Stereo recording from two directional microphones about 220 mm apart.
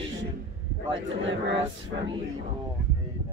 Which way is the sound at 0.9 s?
55° right (ahead or behind).